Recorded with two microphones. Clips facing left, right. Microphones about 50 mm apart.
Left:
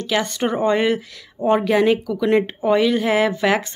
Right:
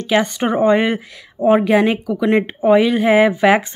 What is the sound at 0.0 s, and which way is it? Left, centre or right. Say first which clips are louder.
A woman's voice: right 4 dB; centre.